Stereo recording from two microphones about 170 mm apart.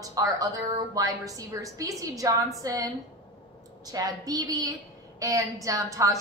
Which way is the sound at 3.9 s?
20° right (ahead or behind).